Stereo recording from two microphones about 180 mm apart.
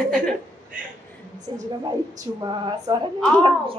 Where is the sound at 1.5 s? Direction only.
25° right (ahead or behind).